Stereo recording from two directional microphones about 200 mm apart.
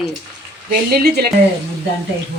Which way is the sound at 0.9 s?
50° right (ahead or behind).